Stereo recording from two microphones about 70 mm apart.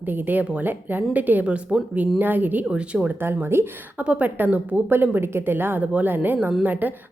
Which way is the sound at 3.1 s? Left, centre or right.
Right.